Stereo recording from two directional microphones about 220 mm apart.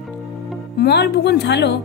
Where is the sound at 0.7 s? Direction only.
50° left (ahead or behind).